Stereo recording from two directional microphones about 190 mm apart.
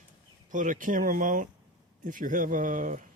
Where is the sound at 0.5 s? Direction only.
45° right (ahead or behind).